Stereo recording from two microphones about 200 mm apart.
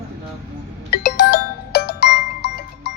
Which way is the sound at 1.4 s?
55° left (ahead or behind).